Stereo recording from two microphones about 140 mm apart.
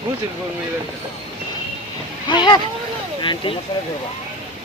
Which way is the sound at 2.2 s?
35° left (ahead or behind).